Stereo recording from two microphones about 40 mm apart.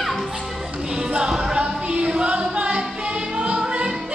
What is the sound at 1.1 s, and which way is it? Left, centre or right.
Music, centre.